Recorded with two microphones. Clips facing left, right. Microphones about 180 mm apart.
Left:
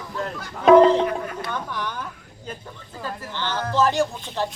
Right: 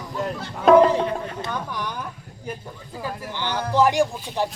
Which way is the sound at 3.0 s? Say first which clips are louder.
Right 1 dB; 10° right (ahead or behind).